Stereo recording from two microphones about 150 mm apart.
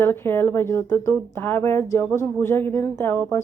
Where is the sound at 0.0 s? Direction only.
15° left (ahead or behind).